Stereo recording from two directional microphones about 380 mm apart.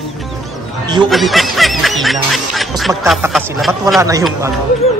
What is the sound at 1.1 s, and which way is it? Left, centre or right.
Speech, centre.